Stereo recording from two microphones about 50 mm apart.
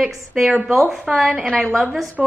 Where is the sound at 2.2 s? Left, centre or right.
Centre.